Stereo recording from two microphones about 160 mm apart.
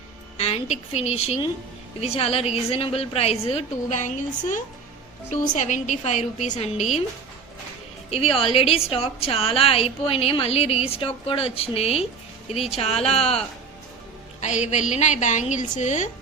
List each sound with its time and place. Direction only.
0.3 s a woman's voice: 40° left (ahead or behind)
8.1 s a woman's voice: 35° left (ahead or behind)
14.4 s a woman's voice: 45° left (ahead or behind)